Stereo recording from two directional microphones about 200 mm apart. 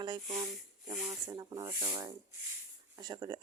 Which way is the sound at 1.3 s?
20° right (ahead or behind).